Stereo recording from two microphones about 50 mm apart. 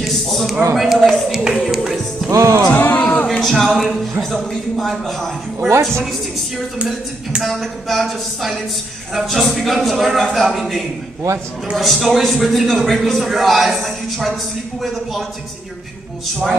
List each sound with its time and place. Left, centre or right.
0.0 s a sound: centre
0.7 s a man's voice: centre
2.2 s music: right
3.0 s a sound: left
3.3 s a man's voice: centre
5.7 s a woman's voice: right
7.4 s a man's voice: centre